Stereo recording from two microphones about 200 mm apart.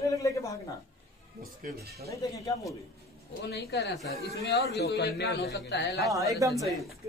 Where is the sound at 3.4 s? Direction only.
55° left (ahead or behind).